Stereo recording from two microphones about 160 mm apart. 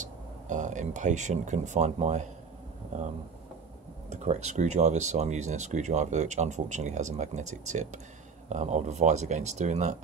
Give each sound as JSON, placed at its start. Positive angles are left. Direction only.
{"t": 0.0, "sound": "speech", "side_deg": -50}
{"t": 4.1, "sound": "speech", "side_deg": -45}